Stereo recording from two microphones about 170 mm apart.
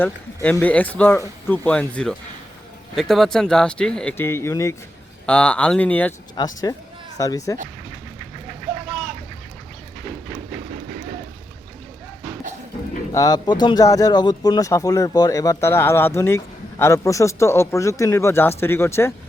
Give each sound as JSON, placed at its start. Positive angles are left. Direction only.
{"t": 0.5, "sound": "speech", "side_deg": 10}
{"t": 5.2, "sound": "speech", "side_deg": 5}
{"t": 6.4, "sound": "speech", "side_deg": 25}
{"t": 13.1, "sound": "speech", "side_deg": 20}